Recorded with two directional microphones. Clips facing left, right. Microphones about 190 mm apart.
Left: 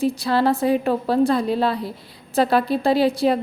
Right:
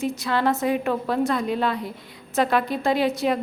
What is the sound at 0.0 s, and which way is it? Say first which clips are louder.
A woman's voice: left 4 dB; 35° left (ahead or behind).